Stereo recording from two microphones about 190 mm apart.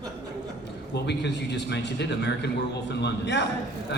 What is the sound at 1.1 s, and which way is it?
A man's voice, 65° left (ahead or behind).